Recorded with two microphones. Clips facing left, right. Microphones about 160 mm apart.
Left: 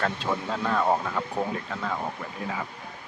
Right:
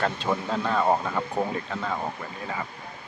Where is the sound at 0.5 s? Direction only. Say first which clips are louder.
Right 1 dB; 5° right (ahead or behind).